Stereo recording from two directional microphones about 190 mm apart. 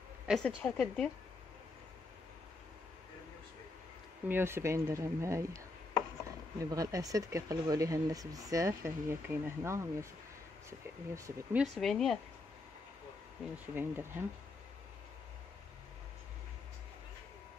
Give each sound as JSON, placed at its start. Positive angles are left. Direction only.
{"t": 0.3, "sound": "speech", "side_deg": 0}
{"t": 4.3, "sound": "speech", "side_deg": -10}
{"t": 6.6, "sound": "speech", "side_deg": -15}
{"t": 11.6, "sound": "speech", "side_deg": 0}
{"t": 13.7, "sound": "speech", "side_deg": -10}